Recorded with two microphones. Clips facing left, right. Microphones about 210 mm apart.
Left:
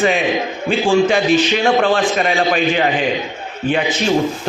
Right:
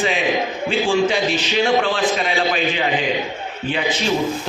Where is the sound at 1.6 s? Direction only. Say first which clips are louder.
Left 3 dB; 45° left (ahead or behind).